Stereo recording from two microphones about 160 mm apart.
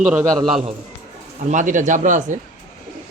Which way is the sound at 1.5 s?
50° right (ahead or behind).